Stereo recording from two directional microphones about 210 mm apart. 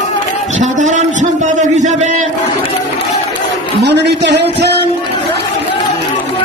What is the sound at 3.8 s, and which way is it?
Speech, 55° right (ahead or behind).